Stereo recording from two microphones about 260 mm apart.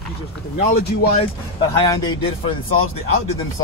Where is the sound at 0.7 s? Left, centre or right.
Left.